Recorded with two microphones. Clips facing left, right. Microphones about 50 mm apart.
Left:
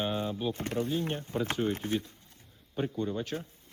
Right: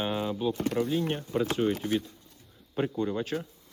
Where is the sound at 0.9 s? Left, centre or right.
Right.